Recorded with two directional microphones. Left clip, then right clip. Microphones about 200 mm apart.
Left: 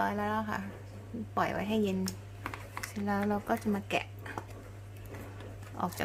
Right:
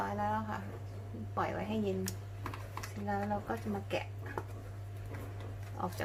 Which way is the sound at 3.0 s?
50° left (ahead or behind).